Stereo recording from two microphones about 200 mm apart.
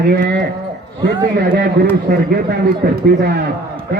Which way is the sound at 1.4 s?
50° right (ahead or behind).